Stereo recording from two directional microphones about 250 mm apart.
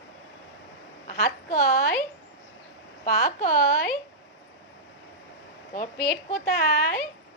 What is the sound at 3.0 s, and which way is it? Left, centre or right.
Speech, left.